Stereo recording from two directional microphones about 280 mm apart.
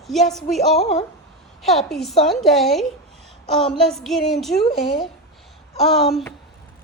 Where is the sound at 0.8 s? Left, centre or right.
Left.